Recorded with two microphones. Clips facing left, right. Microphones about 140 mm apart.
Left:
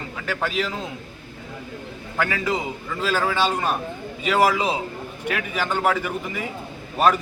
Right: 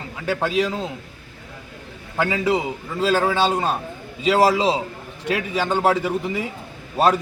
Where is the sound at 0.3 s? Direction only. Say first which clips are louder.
Right 5 dB; 20° right (ahead or behind).